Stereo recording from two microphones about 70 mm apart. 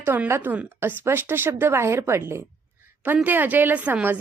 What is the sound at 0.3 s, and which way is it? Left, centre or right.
A woman's voice, right.